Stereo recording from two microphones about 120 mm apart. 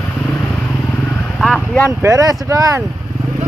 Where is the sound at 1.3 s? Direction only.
Centre (ahead or behind).